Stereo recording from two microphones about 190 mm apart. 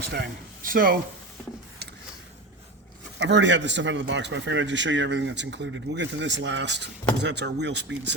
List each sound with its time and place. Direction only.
0.0 s speech: 55° right (ahead or behind)
3.2 s a man's voice: 70° right (ahead or behind)